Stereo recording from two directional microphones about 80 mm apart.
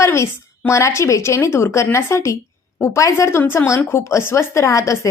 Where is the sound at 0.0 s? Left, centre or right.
Left.